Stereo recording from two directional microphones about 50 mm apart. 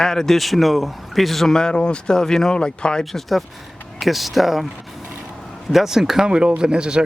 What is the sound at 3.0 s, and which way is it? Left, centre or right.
A man's voice, centre.